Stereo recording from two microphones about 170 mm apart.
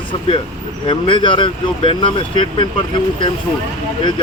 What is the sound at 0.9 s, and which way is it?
Speech, 30° left (ahead or behind).